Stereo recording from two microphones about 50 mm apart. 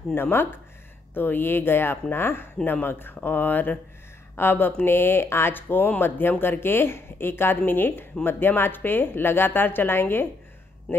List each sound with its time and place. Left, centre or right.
0.1 s speech: left